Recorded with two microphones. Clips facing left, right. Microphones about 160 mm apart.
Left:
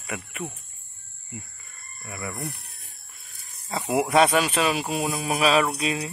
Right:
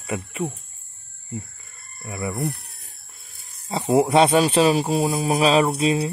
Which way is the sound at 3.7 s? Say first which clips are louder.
Right 5 dB; 30° right (ahead or behind).